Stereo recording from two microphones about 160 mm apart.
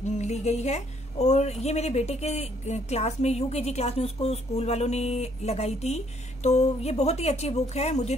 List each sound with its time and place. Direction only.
0.0 s speech: 45° left (ahead or behind)